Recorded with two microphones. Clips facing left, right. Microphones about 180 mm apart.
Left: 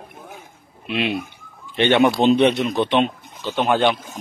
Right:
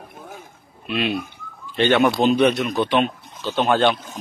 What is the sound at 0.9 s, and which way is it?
Speech, 20° left (ahead or behind).